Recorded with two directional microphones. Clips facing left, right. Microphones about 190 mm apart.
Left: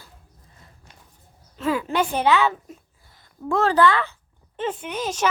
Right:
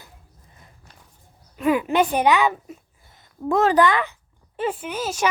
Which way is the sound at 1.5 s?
15° right (ahead or behind).